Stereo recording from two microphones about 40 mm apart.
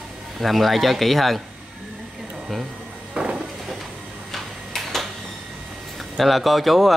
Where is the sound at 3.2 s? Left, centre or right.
Right.